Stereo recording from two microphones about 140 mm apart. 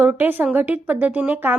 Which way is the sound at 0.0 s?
15° right (ahead or behind).